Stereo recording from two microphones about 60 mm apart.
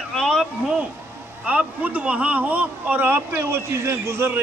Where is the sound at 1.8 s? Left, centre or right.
Right.